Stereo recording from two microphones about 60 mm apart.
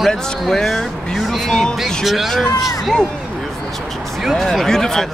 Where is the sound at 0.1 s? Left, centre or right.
Centre.